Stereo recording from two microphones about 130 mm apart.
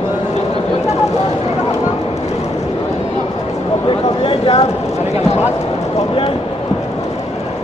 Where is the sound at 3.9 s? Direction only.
45° left (ahead or behind).